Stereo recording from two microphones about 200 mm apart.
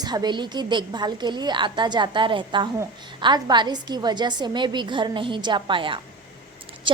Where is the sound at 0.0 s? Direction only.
20° right (ahead or behind).